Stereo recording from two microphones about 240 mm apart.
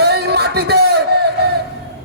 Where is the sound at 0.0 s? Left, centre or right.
Right.